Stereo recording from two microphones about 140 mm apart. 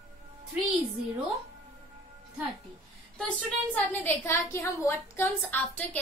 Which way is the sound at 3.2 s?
10° left (ahead or behind).